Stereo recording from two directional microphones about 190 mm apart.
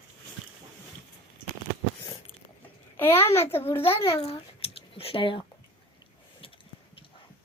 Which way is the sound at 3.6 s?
30° left (ahead or behind).